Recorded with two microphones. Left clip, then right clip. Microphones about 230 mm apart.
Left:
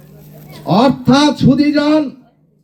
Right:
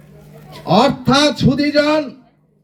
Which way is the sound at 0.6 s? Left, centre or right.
Right.